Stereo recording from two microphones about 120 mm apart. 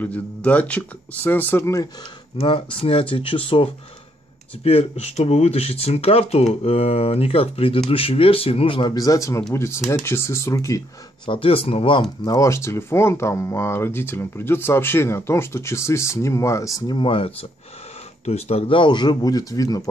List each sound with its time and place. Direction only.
0.0 s speech: 10° left (ahead or behind)
2.3 s speech: 50° left (ahead or behind)
8.9 s speech: 30° left (ahead or behind)
11.2 s speech: 50° left (ahead or behind)
12.4 s speech: 25° left (ahead or behind)
16.8 s speech: 45° left (ahead or behind)
18.2 s speech: 60° left (ahead or behind); by 19.8 s 30° left (ahead or behind)